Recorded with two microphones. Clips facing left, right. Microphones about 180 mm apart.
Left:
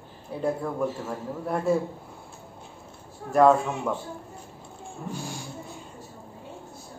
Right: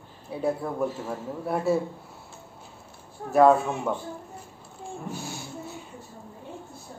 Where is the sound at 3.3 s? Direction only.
5° right (ahead or behind).